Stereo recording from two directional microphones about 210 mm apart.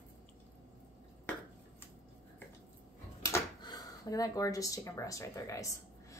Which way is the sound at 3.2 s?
15° left (ahead or behind).